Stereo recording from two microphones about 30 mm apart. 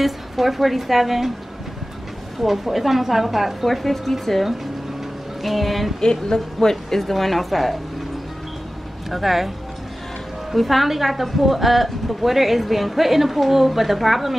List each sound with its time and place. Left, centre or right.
0.0 s a woman's voice: centre
2.4 s a woman's voice: centre
3.6 s a woman's voice: centre
5.9 s a woman's voice: left
7.0 s a woman's voice: centre
9.1 s a woman's voice: centre
10.5 s a woman's voice: centre